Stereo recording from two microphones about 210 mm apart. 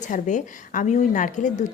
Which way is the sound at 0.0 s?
35° left (ahead or behind).